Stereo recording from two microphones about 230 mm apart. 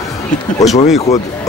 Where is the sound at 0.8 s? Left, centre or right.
Left.